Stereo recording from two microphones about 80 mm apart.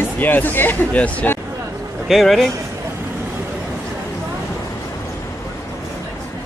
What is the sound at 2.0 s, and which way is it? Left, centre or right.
Speech, centre.